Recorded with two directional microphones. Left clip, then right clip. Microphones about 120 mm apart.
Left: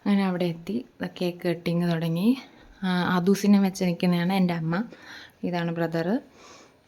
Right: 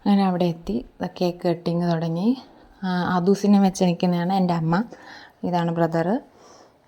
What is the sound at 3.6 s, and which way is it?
Speech, 30° right (ahead or behind).